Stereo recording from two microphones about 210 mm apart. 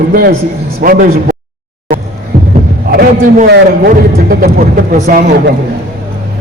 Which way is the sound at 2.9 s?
45° right (ahead or behind).